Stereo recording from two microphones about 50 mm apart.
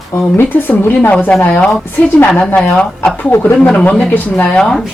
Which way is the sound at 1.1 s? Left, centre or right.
Left.